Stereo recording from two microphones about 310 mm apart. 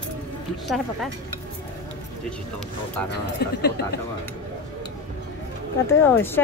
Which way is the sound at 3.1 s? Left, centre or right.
Left.